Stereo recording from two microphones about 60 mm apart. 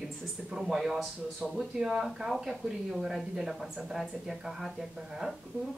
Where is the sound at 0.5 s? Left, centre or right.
Centre.